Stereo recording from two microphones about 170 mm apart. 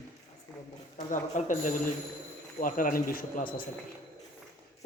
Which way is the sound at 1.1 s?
50° left (ahead or behind).